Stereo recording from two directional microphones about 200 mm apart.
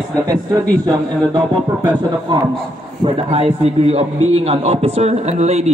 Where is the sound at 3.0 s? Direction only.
30° right (ahead or behind).